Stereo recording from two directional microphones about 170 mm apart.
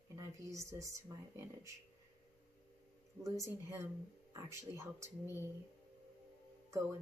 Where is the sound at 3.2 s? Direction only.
20° right (ahead or behind).